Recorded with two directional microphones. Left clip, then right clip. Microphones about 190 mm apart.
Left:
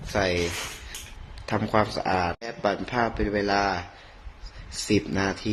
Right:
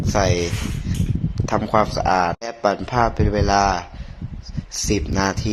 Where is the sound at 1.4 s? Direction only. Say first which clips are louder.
Right 6 dB; 15° right (ahead or behind).